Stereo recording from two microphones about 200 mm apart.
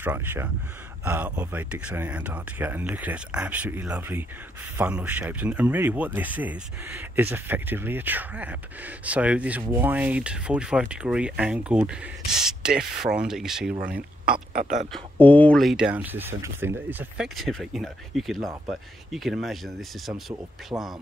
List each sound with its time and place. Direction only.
0.0 s speech: 10° right (ahead or behind)
14.2 s speech: 45° right (ahead or behind)
14.9 s speech: 10° left (ahead or behind)
20.7 s speech: 15° right (ahead or behind)